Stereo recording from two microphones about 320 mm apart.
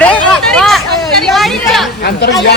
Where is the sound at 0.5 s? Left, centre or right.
Centre.